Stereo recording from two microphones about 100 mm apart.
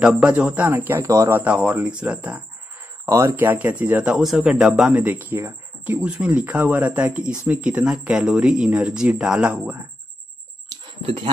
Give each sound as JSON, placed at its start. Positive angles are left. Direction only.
{"t": 0.0, "sound": "speech", "side_deg": -10}
{"t": 0.7, "sound": "speech", "side_deg": -25}
{"t": 1.4, "sound": "speech", "side_deg": -15}
{"t": 3.1, "sound": "speech", "side_deg": -30}
{"t": 3.4, "sound": "speech", "side_deg": -15}
{"t": 4.1, "sound": "speech", "side_deg": -5}
{"t": 5.0, "sound": "speech", "side_deg": -15}
{"t": 5.9, "sound": "speech", "side_deg": -10}
{"t": 11.0, "sound": "speech", "side_deg": -65}